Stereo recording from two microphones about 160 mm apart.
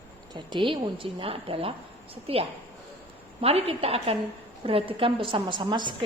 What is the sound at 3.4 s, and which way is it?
A woman's voice, 35° right (ahead or behind).